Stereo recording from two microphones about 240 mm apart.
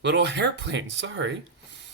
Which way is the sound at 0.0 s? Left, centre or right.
Right.